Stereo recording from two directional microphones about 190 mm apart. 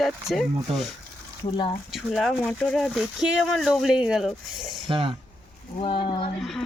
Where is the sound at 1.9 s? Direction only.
Centre (ahead or behind).